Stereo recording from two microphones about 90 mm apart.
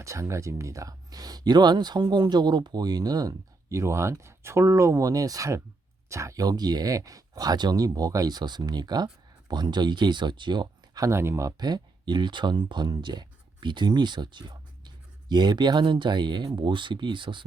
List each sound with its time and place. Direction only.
0.0 s speech: 35° right (ahead or behind); by 11.0 s 55° right (ahead or behind)
11.0 s speech: 30° right (ahead or behind)
11.6 s speech: 55° right (ahead or behind)
16.5 s speech: 65° right (ahead or behind)